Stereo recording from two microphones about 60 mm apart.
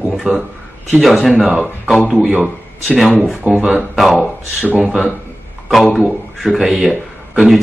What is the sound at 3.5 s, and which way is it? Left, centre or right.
Speech, centre.